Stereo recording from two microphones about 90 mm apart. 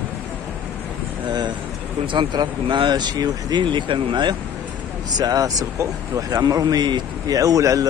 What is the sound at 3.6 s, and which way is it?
Speech, 65° right (ahead or behind).